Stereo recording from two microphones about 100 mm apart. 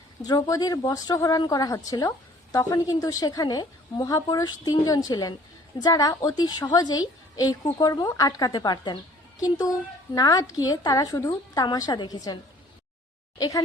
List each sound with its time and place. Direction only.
0.3 s speech: 35° left (ahead or behind)